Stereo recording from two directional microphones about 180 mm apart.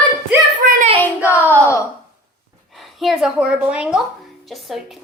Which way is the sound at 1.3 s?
10° right (ahead or behind).